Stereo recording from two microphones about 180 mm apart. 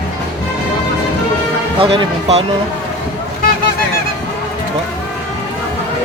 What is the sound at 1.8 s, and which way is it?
Speech, 30° right (ahead or behind).